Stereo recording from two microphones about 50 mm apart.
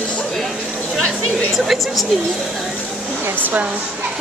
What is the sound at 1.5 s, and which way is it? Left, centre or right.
Speech, centre.